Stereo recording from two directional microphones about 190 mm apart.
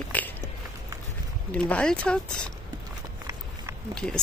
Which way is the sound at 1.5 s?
5° left (ahead or behind).